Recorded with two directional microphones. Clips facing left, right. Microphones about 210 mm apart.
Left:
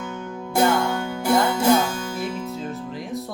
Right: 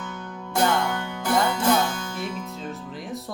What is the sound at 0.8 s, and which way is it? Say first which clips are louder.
Music: left 3 dB; 25° left (ahead or behind).